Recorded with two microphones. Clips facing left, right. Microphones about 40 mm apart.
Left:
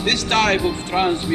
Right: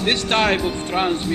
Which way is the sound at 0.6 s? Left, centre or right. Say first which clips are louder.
Left 2 dB; centre.